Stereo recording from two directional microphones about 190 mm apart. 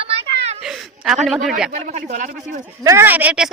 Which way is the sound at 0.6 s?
5° right (ahead or behind).